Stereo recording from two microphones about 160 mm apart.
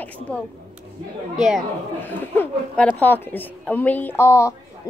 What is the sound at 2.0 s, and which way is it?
A woman's voice, 15° left (ahead or behind).